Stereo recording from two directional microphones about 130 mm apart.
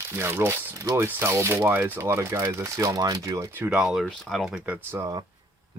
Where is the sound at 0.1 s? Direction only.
20° right (ahead or behind).